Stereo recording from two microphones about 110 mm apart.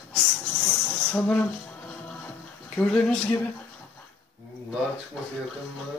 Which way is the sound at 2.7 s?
5° left (ahead or behind).